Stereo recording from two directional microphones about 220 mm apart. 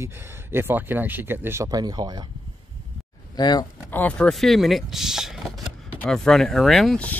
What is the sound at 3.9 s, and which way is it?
Speech, 10° left (ahead or behind).